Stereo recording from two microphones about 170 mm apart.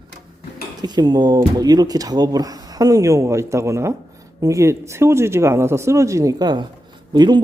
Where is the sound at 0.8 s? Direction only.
25° right (ahead or behind).